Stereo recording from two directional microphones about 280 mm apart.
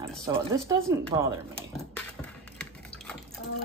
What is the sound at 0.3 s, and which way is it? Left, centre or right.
Speech, centre.